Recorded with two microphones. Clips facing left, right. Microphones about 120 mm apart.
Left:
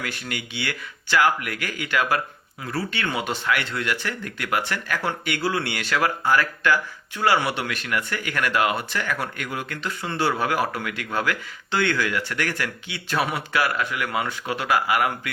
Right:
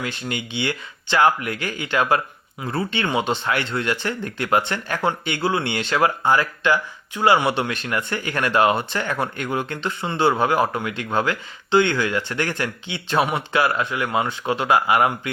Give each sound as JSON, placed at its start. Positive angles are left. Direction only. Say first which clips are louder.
{"t": 0.0, "sound": "speech", "louder": "right 4 dB", "side_deg": -25}